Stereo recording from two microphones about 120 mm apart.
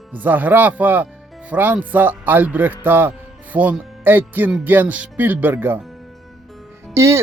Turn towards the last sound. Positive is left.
turn(degrees=-25)  # may be behind; listen again after turning